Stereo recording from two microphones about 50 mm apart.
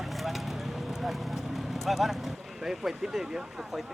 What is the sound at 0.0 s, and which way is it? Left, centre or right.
Clip-clop, centre.